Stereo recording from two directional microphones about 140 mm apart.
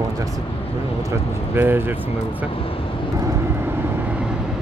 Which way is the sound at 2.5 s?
40° left (ahead or behind).